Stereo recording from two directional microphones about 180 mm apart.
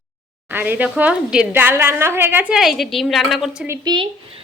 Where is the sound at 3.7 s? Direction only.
25° right (ahead or behind).